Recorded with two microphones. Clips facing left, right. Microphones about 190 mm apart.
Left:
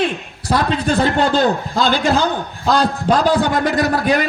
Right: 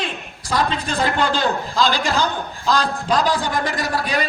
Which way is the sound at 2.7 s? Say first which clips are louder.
Left 5 dB; 55° left (ahead or behind).